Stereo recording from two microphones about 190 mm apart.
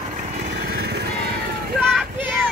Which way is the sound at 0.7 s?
55° right (ahead or behind).